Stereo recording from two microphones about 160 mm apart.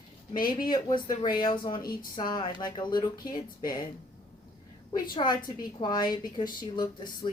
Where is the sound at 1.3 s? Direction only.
30° left (ahead or behind).